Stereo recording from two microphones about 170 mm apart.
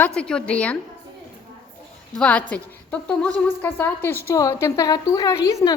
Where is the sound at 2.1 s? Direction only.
5° left (ahead or behind).